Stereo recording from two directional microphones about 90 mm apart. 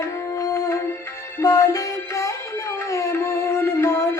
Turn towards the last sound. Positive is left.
turn(degrees=35)  # may be behind; listen again after turning